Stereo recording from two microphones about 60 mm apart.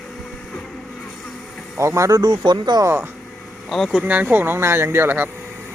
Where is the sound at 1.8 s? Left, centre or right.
Right.